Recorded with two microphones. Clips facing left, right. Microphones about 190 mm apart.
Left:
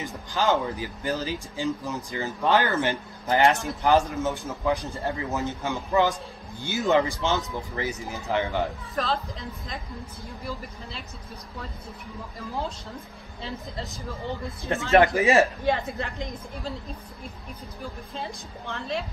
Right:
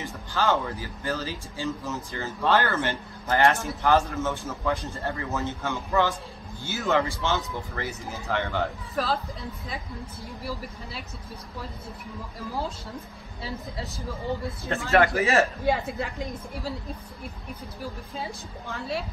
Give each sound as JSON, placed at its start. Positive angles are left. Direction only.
{"t": 0.0, "sound": "speech", "side_deg": 15}
{"t": 8.9, "sound": "a woman's voice", "side_deg": -5}
{"t": 10.4, "sound": "a woman's voice", "side_deg": -5}
{"t": 13.4, "sound": "a woman's voice", "side_deg": -5}
{"t": 14.9, "sound": "speech", "side_deg": 15}
{"t": 15.6, "sound": "a woman's voice", "side_deg": -5}
{"t": 18.1, "sound": "a woman's voice", "side_deg": -5}